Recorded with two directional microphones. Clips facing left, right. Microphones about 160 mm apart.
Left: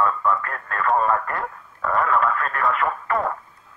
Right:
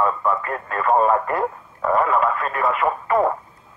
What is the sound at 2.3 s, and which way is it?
Speech, 10° right (ahead or behind).